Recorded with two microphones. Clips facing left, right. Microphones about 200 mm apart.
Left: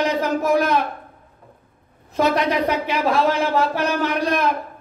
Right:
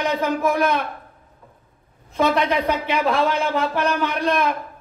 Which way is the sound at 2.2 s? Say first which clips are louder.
Even; 55° right (ahead or behind).